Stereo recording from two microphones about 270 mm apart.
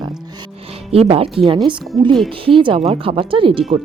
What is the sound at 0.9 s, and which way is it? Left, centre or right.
Speech, right.